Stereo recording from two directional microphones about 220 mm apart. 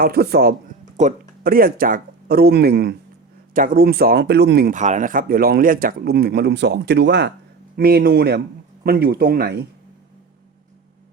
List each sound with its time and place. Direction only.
0.0 s speech: 45° right (ahead or behind)